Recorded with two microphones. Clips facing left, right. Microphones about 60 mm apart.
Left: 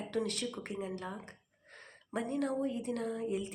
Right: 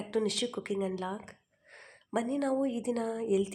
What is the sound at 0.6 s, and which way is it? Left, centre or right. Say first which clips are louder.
Speech: right 6 dB; right.